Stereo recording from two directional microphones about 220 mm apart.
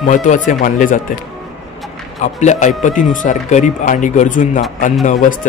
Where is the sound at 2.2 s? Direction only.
35° left (ahead or behind).